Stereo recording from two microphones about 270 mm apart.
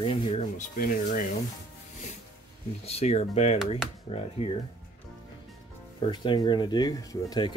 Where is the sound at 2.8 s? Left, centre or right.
Left.